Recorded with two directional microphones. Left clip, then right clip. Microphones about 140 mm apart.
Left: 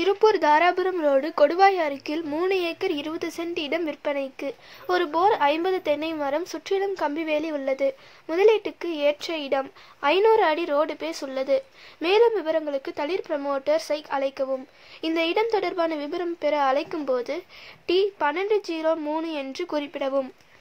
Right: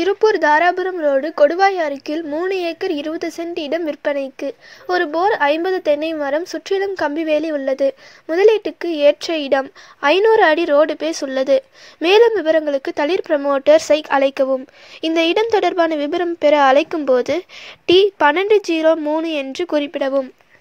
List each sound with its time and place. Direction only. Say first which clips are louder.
0.0 s a woman's voice: right 5 dB; 25° right (ahead or behind)